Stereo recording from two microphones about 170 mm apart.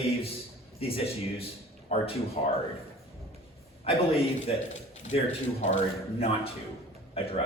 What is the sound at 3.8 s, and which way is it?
A man's voice, 35° left (ahead or behind).